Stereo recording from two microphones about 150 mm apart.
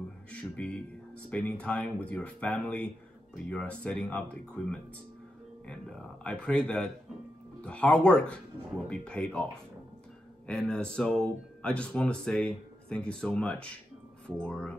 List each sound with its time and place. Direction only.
0.3 s speech: 5° left (ahead or behind)